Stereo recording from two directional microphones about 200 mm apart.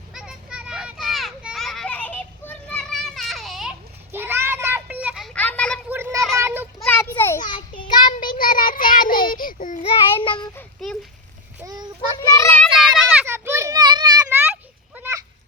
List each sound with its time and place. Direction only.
0.1 s children playing: 5° right (ahead or behind)
5.9 s a sound: 15° right (ahead or behind)
6.3 s child singing: 10° right (ahead or behind)
6.7 s a sound: 10° left (ahead or behind)
7.9 s child singing: 20° left (ahead or behind)
8.2 s child singing: 45° left (ahead or behind)
9.8 s child singing: 25° left (ahead or behind)
11.6 s a sound: 20° right (ahead or behind)
12.3 s child singing: 15° left (ahead or behind)
13.0 s children playing: 10° right (ahead or behind)
14.4 s children playing: 10° right (ahead or behind)